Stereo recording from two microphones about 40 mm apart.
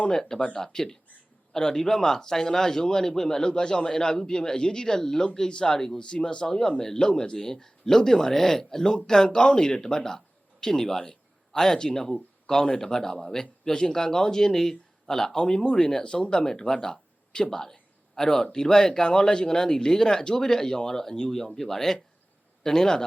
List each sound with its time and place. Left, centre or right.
0.1 s a man's voice: centre